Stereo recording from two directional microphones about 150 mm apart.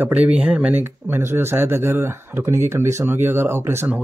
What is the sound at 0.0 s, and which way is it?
Speech, 10° right (ahead or behind).